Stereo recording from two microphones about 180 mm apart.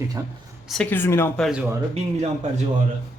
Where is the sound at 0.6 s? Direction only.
5° left (ahead or behind).